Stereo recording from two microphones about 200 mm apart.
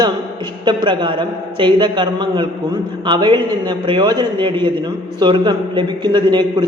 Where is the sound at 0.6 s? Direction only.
20° right (ahead or behind).